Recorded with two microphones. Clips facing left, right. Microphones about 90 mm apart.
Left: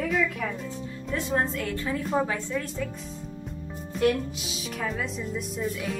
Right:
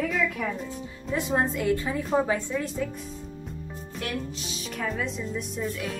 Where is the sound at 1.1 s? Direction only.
15° right (ahead or behind).